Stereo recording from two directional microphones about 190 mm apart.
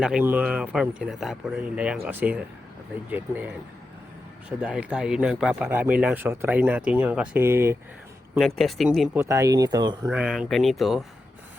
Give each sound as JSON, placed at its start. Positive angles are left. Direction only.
{"t": 0.0, "sound": "speech", "side_deg": -5}
{"t": 8.4, "sound": "speech", "side_deg": 0}
{"t": 9.2, "sound": "speech", "side_deg": -15}
{"t": 10.1, "sound": "speech", "side_deg": 0}